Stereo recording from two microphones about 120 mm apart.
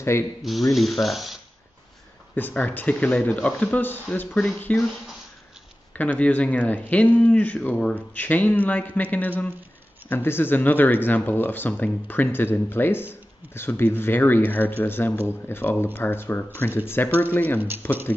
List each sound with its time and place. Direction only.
0.4 s speech: centre (ahead or behind)
2.3 s speech: 15° left (ahead or behind)
17.6 s speech: 15° right (ahead or behind)